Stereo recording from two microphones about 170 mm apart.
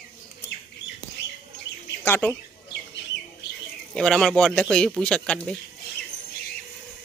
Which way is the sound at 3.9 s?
5° left (ahead or behind).